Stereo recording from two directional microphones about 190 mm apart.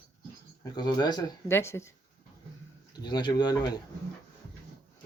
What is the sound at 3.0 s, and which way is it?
Speech, 25° left (ahead or behind).